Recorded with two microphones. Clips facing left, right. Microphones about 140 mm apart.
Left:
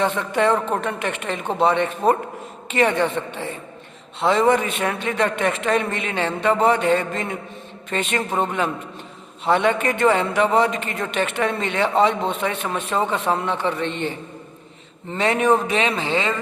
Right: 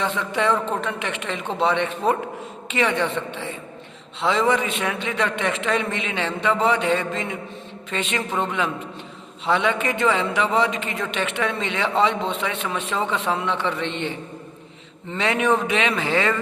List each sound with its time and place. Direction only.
0.0 s a man's voice: 50° left (ahead or behind)
15.1 s speech: 40° left (ahead or behind); by 16.4 s 20° left (ahead or behind)